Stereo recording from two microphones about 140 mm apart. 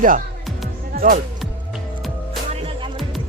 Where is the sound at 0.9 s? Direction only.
85° right.